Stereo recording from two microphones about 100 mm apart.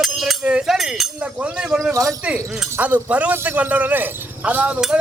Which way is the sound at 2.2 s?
15° right (ahead or behind).